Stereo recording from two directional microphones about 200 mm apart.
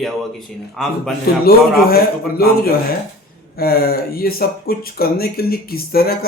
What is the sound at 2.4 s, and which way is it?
Speech, 50° left (ahead or behind).